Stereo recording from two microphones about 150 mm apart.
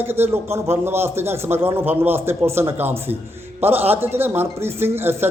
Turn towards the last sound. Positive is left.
turn(degrees=-15)  # may be behind; listen again after turning